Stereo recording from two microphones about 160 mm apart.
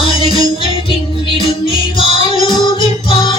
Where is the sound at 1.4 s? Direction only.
35° left (ahead or behind).